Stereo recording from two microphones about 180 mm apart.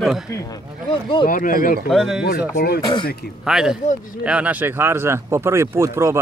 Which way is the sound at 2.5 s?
60° left (ahead or behind).